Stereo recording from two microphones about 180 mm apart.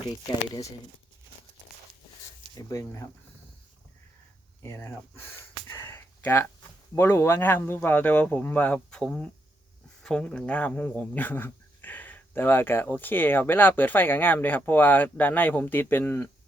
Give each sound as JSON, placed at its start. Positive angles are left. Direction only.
{"t": 2.6, "sound": "speech", "side_deg": 20}
{"t": 4.6, "sound": "speech", "side_deg": 15}
{"t": 5.7, "sound": "a sound", "side_deg": 15}
{"t": 6.9, "sound": "speech", "side_deg": 15}